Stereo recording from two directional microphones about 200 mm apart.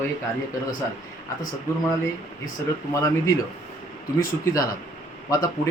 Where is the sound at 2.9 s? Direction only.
15° left (ahead or behind).